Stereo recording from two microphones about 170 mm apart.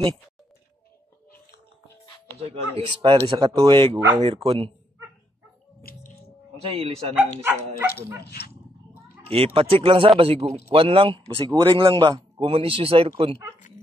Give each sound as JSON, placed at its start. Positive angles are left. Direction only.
{"t": 2.4, "sound": "speech", "side_deg": -35}
{"t": 5.8, "sound": "music", "side_deg": 60}
{"t": 6.8, "sound": "speech", "side_deg": -35}
{"t": 7.7, "sound": "speech", "side_deg": 65}
{"t": 9.3, "sound": "speech", "side_deg": -35}